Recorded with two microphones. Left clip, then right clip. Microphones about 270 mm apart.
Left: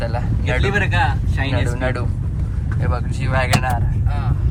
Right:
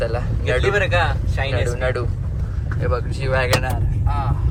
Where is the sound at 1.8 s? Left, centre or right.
Centre.